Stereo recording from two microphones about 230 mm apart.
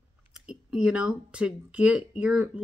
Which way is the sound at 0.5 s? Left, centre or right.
Centre.